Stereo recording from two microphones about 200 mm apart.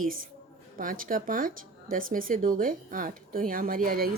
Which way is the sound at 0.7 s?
45° right (ahead or behind).